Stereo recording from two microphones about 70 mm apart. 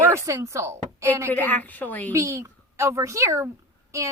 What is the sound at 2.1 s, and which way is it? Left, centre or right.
A child's voice, right.